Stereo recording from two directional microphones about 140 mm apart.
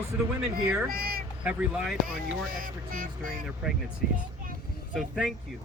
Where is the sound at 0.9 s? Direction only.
90° right.